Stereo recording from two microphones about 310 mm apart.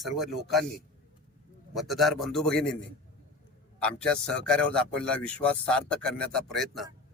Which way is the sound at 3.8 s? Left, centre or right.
Centre.